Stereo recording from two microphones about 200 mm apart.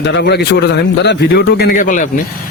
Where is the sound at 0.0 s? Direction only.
60° left (ahead or behind).